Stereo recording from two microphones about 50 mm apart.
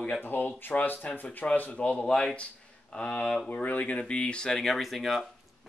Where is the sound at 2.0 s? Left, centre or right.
Centre.